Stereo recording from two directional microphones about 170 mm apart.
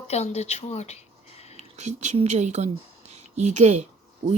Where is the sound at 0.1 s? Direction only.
40° left (ahead or behind).